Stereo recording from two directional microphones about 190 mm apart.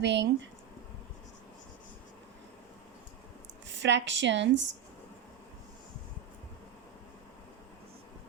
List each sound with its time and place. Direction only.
0.0 s speech: 70° right (ahead or behind)
3.8 s speech: 70° right (ahead or behind)